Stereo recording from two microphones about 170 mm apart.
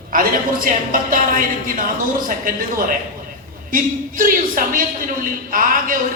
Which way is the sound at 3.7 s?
55° right (ahead or behind).